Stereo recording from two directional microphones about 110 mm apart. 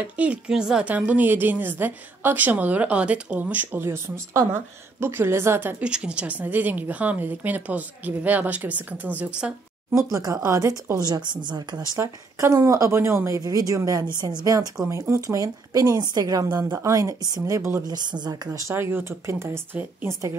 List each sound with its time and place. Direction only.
0.2 s a woman's voice: 10° right (ahead or behind)
5.9 s a woman's voice: 10° right (ahead or behind)
10.1 s a woman's voice: 35° right (ahead or behind)
11.1 s speech: 45° right (ahead or behind)
12.0 s a woman's voice: 25° right (ahead or behind)